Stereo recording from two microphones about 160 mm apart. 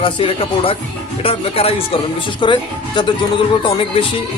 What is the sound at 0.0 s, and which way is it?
Speech, 35° left (ahead or behind).